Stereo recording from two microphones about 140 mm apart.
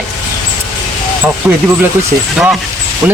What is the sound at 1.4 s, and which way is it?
Speech, 10° right (ahead or behind).